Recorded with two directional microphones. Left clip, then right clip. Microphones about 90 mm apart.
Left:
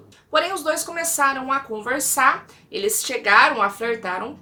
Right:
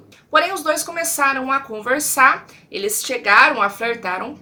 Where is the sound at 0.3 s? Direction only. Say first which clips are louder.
Right 4 dB; 25° right (ahead or behind).